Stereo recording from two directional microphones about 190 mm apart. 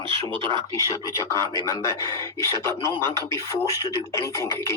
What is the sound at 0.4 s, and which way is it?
Speech, 25° right (ahead or behind).